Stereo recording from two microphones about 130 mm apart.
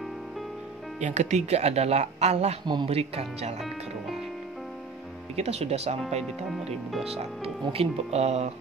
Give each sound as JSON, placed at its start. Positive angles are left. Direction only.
{"t": 0.9, "sound": "speech", "side_deg": -60}
{"t": 2.6, "sound": "speech", "side_deg": -35}
{"t": 2.9, "sound": "speech", "side_deg": -50}
{"t": 5.3, "sound": "speech", "side_deg": -55}